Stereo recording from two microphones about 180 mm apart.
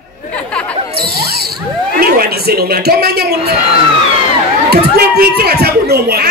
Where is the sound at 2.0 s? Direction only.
55° right (ahead or behind).